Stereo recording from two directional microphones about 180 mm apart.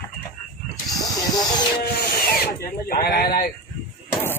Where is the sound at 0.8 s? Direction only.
20° left (ahead or behind).